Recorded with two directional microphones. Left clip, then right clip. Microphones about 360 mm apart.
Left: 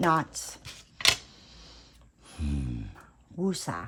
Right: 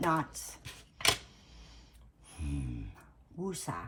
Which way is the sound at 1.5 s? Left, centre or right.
Left.